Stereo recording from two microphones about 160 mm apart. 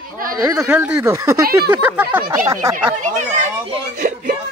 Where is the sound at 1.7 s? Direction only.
10° right (ahead or behind).